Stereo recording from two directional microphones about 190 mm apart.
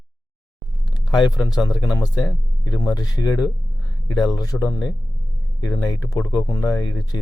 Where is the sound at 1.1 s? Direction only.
20° left (ahead or behind).